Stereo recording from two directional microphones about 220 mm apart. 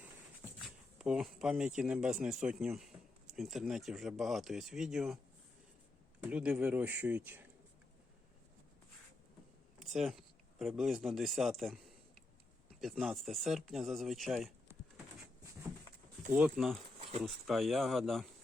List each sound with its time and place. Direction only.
0.6 s speech: 5° right (ahead or behind)
6.2 s speech: 5° right (ahead or behind)
9.8 s speech: centre (ahead or behind)
12.8 s speech: centre (ahead or behind)
16.3 s speech: 5° right (ahead or behind)
17.0 s a sound: 30° right (ahead or behind)
17.2 s speech: centre (ahead or behind)